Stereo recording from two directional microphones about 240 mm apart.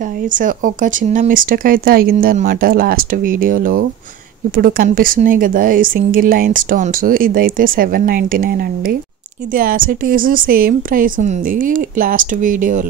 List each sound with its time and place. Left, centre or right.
0.3 s speech: right